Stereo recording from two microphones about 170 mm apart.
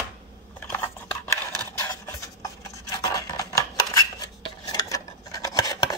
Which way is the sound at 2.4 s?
20° left (ahead or behind).